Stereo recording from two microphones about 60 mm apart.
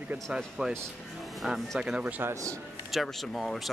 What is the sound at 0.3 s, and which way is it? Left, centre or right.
Speech, centre.